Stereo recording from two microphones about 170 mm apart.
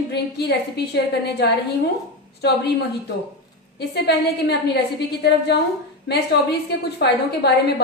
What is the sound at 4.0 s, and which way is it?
A woman's voice, 75° left (ahead or behind).